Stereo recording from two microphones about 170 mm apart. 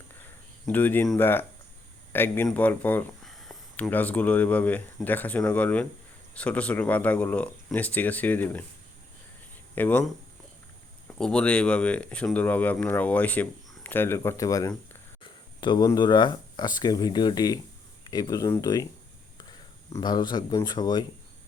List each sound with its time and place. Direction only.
0.6 s speech: 10° left (ahead or behind)
9.7 s speech: 10° left (ahead or behind)
11.2 s speech: 5° left (ahead or behind)
15.2 s a sound: 30° left (ahead or behind)
15.9 s speech: 25° left (ahead or behind)